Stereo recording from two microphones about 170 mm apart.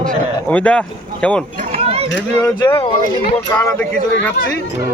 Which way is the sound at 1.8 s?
35° right (ahead or behind).